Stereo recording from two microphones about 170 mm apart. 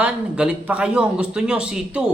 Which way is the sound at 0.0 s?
5° right (ahead or behind).